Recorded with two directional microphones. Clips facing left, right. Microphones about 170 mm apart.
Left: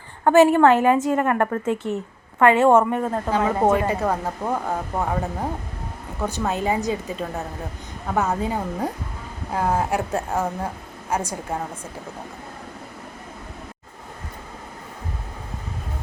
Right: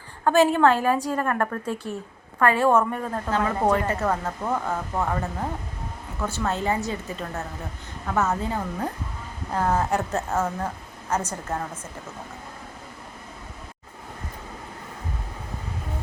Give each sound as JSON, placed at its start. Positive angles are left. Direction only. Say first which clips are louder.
{"t": 0.3, "sound": "a woman's voice", "louder": "left 4 dB", "side_deg": 15}